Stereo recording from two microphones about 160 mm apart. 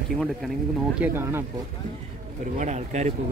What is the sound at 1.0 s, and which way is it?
Speech, 15° right (ahead or behind).